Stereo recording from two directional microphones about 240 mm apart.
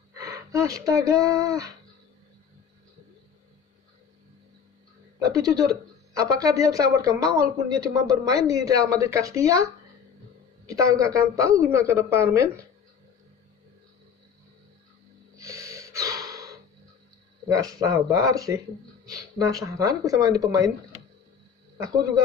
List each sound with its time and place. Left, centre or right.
0.1 s speech: centre
5.2 s speech: centre
10.7 s speech: centre
15.3 s gasp: centre
17.5 s speech: centre
21.8 s speech: centre